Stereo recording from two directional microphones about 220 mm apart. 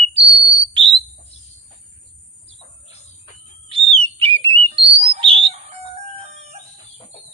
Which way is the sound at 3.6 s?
25° right (ahead or behind).